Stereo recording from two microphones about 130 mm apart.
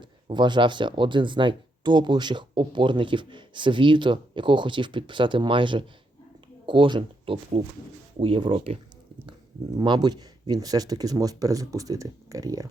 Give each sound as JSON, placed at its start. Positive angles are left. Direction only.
{"t": 0.0, "sound": "speech", "side_deg": -35}
{"t": 9.7, "sound": "speech", "side_deg": -35}